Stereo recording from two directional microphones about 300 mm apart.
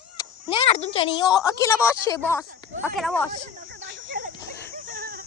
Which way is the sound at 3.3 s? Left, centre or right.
Right.